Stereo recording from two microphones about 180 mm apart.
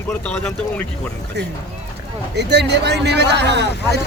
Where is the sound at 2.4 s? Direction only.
70° right (ahead or behind).